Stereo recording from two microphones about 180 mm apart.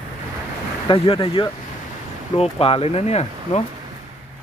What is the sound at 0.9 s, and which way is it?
Speech, 30° left (ahead or behind).